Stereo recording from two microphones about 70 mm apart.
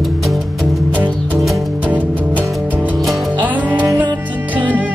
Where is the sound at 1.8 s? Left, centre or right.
Right.